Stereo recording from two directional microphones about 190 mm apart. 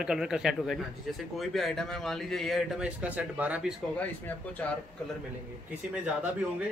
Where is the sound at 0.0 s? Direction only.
5° right (ahead or behind).